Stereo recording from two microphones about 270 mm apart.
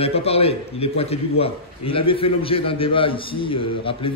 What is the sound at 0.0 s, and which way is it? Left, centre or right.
A man's voice, left.